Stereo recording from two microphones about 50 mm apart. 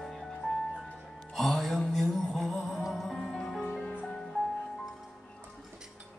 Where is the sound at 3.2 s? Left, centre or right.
Centre.